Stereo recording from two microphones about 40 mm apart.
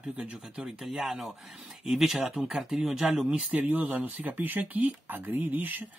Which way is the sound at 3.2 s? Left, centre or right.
Right.